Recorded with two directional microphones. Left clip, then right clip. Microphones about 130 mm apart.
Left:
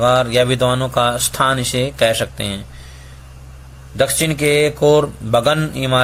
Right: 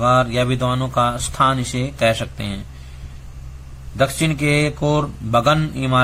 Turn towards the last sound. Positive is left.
turn(degrees=25)  # may be behind; listen again after turning